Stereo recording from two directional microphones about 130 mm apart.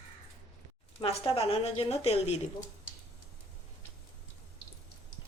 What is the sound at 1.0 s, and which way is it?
A woman's voice, 50° left (ahead or behind).